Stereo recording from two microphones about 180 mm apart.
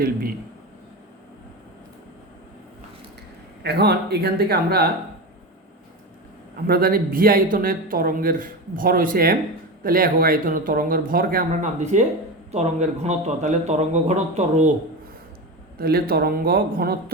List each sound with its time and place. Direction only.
0.0 s a man's voice: 55° right (ahead or behind)
3.6 s speech: 65° right (ahead or behind)
6.7 s speech: 55° right (ahead or behind); by 14.7 s 40° right (ahead or behind)
15.8 s speech: 60° right (ahead or behind)